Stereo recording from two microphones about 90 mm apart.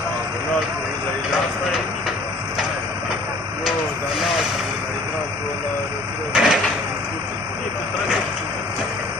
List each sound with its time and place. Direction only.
6.3 s vehicle: 5° right (ahead or behind)